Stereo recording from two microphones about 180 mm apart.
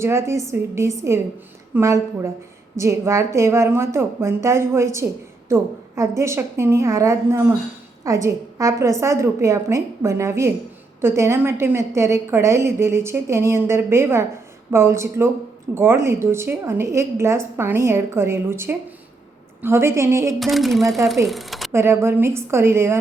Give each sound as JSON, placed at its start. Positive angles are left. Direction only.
{"t": 0.0, "sound": "a woman's voice", "side_deg": -15}
{"t": 20.4, "sound": "speech", "side_deg": 0}
{"t": 21.7, "sound": "a woman's voice", "side_deg": -15}